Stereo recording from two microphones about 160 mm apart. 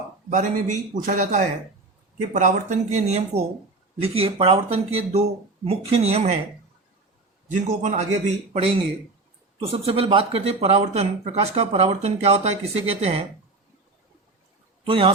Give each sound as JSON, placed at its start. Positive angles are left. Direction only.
{"t": 0.3, "sound": "a man's voice", "side_deg": -50}
{"t": 7.5, "sound": "a man's voice", "side_deg": -50}
{"t": 9.6, "sound": "speech", "side_deg": -35}
{"t": 14.8, "sound": "a man's voice", "side_deg": -35}